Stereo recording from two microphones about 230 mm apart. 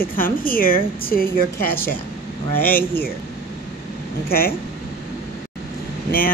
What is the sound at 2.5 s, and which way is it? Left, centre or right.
Speech, centre.